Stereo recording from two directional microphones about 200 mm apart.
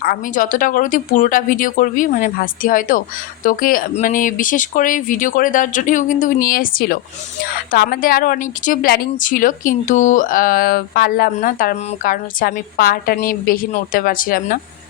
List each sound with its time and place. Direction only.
0.0 s a woman's voice: 45° left (ahead or behind)